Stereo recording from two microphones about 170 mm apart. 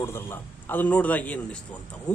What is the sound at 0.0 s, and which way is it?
A man's voice, 15° left (ahead or behind).